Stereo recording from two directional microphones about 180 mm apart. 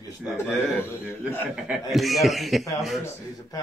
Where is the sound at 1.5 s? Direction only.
Centre (ahead or behind).